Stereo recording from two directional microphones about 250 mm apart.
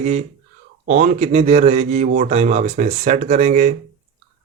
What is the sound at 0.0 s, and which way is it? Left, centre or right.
Speech, right.